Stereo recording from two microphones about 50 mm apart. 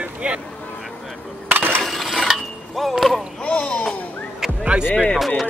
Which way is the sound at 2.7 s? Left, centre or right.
Centre.